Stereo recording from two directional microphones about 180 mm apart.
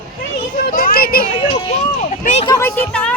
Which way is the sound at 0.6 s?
55° left (ahead or behind).